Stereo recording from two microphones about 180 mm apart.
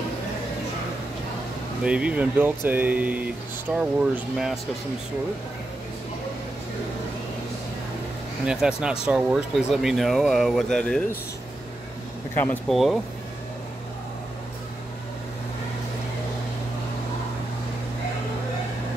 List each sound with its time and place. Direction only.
1.8 s speech: 5° right (ahead or behind)
8.5 s speech: 5° right (ahead or behind)
12.4 s speech: 10° left (ahead or behind)
12.7 s speech: centre (ahead or behind)